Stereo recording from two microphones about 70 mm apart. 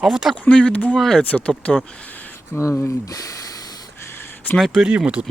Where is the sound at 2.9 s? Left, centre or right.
Left.